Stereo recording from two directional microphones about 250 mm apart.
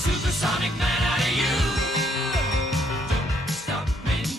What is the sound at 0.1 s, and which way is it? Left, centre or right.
Music, centre.